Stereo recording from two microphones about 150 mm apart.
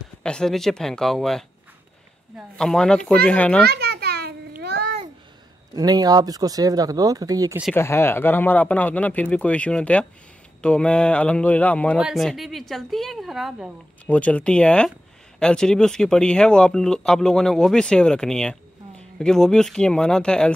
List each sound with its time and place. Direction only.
0.2 s speech: 5° left (ahead or behind)
2.5 s speech: 5° left (ahead or behind)
3.6 s a sound: 90° right
5.8 s speech: 25° right (ahead or behind)
7.7 s speech: 15° left (ahead or behind); by 13.7 s 5° right (ahead or behind)
14.0 s speech: 10° left (ahead or behind)